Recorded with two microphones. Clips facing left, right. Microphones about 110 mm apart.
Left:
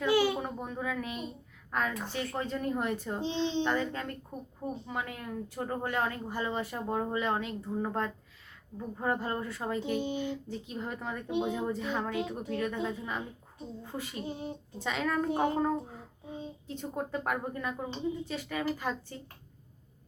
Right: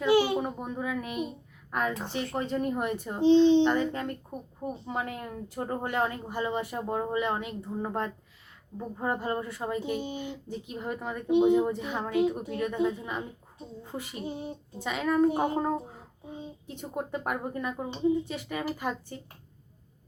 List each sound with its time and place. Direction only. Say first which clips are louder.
0.0 s a child's voice: right 3 dB; 20° right (ahead or behind)
4.9 s a child's voice: right 3 dB; 30° right (ahead or behind)
9.3 s speech: right 2 dB; 15° right (ahead or behind)